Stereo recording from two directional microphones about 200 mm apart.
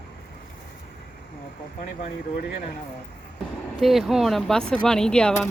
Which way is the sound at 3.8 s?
Centre (ahead or behind).